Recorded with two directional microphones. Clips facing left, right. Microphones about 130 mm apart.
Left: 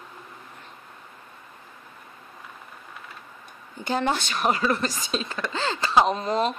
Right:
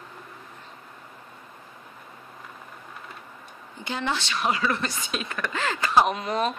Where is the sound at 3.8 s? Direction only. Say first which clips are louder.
Left 4 dB; 45° left (ahead or behind).